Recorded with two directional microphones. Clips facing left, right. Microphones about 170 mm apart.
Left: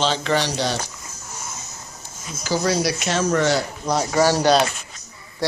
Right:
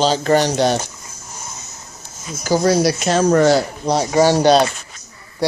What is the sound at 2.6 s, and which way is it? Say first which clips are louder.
Speech: right 6 dB; 35° right (ahead or behind).